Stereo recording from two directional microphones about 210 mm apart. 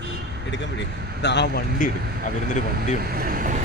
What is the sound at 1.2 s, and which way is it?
Speech, 55° left (ahead or behind).